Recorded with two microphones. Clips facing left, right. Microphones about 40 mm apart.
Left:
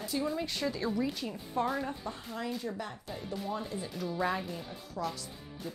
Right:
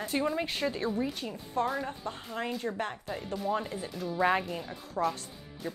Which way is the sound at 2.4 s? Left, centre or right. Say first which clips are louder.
Right 4 dB; right.